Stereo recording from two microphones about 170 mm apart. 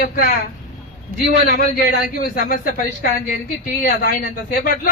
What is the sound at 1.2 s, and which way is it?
Speech, 55° left (ahead or behind).